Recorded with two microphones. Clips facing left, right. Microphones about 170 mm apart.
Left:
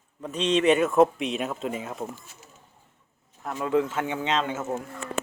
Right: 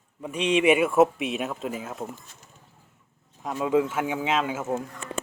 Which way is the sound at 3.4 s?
15° right (ahead or behind).